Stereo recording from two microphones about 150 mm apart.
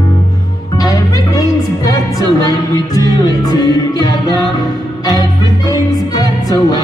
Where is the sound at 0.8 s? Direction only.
25° left (ahead or behind).